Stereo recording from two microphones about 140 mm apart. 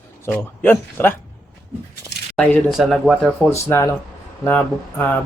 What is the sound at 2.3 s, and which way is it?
Speech, 5° left (ahead or behind).